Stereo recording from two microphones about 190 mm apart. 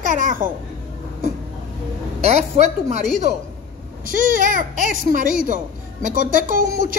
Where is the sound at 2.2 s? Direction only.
35° right (ahead or behind).